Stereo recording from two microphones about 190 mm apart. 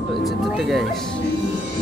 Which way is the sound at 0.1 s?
Centre (ahead or behind).